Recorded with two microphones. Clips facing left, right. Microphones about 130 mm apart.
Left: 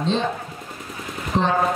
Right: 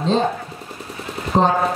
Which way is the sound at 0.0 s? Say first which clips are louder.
Right 4 dB; 40° right (ahead or behind).